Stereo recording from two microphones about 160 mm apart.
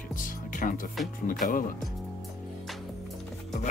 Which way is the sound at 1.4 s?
60° left (ahead or behind).